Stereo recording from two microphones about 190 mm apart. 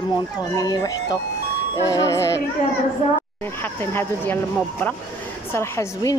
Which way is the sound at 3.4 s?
10° left (ahead or behind).